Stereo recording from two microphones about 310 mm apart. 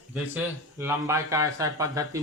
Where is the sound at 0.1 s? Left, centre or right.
Centre.